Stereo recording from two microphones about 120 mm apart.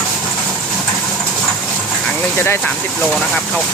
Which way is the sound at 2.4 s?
20° left (ahead or behind).